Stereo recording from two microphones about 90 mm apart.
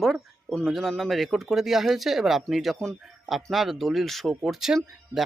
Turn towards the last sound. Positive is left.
turn(degrees=-5)  # may be behind; listen again after turning